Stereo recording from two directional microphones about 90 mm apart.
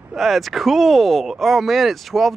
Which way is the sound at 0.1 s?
Centre (ahead or behind).